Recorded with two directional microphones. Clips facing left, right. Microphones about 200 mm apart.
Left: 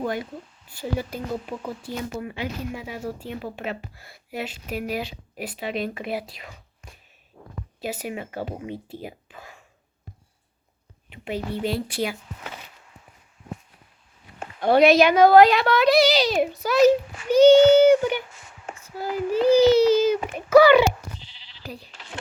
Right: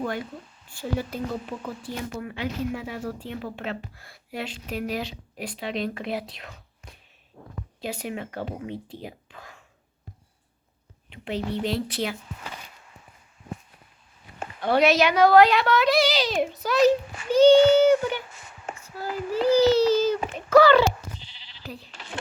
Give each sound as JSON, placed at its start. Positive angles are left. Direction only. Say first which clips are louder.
{"t": 0.7, "sound": "speech", "louder": "left 1 dB", "side_deg": 10}
{"t": 7.8, "sound": "speech", "louder": "left 1 dB", "side_deg": 5}
{"t": 11.1, "sound": "speech", "louder": "even", "side_deg": 10}
{"t": 14.8, "sound": "speech", "louder": "left 4 dB", "side_deg": 15}
{"t": 15.4, "sound": "a child's voice", "louder": "left 2 dB", "side_deg": 40}
{"t": 15.8, "sound": "a child's voice", "louder": "left 4 dB", "side_deg": 10}